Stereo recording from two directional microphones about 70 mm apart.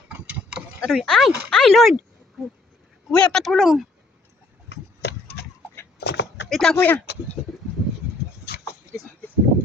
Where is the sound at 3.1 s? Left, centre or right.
Centre.